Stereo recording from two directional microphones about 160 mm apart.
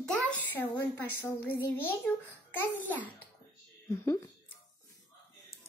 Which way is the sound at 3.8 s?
15° left (ahead or behind).